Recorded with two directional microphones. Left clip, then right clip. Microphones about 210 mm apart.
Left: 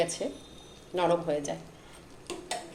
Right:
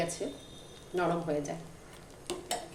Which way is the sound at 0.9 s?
20° left (ahead or behind).